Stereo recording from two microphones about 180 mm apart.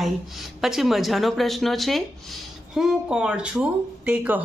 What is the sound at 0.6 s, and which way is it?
Speech, centre (ahead or behind).